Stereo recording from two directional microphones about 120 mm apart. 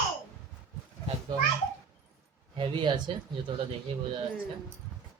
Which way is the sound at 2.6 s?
40° right (ahead or behind).